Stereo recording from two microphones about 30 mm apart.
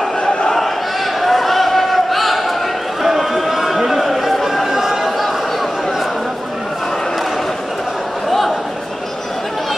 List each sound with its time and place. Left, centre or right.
1.2 s a sound: centre
4.0 s chatter: centre
4.6 s chatter: centre